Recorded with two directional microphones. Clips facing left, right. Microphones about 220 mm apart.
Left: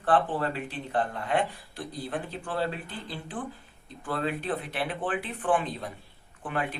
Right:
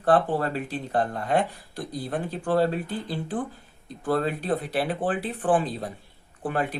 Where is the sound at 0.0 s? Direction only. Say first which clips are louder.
Right 4 dB; 40° right (ahead or behind).